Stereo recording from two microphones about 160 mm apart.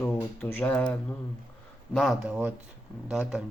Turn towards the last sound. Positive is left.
turn(degrees=-5)  # may be behind; listen again after turning